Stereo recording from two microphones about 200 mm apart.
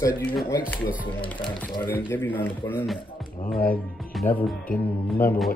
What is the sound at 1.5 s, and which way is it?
Speech, 25° left (ahead or behind).